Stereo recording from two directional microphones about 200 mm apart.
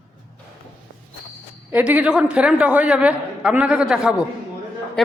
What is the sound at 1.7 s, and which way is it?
A man's voice, 10° right (ahead or behind).